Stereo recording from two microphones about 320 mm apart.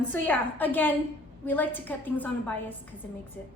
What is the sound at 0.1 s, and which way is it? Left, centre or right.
A woman's voice, centre.